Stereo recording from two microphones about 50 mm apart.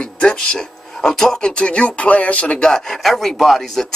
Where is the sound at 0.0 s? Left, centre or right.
Centre.